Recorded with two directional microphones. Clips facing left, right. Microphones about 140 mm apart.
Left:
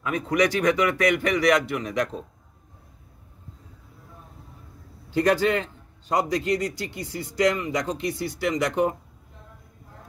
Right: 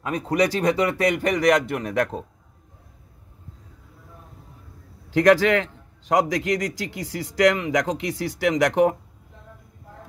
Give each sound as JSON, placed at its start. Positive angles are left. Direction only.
{"t": 0.0, "sound": "speech", "side_deg": -35}
{"t": 5.1, "sound": "a man's voice", "side_deg": -90}